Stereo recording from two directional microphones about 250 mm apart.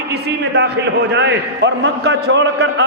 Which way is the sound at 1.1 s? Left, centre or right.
Right.